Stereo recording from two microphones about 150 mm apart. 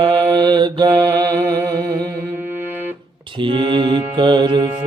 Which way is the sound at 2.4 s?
15° right (ahead or behind).